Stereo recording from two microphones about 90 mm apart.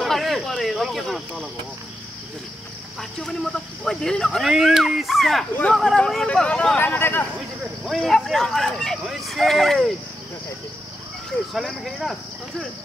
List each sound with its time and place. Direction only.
0.0 s a sound: centre (ahead or behind)
3.0 s speech: 5° left (ahead or behind)
6.8 s speech: 25° left (ahead or behind)
7.8 s speech: centre (ahead or behind)
11.5 s speech: centre (ahead or behind)